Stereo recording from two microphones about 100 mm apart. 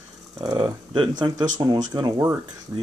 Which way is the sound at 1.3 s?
40° right (ahead or behind).